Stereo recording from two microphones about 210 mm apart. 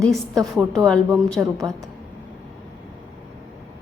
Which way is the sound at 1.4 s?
10° right (ahead or behind).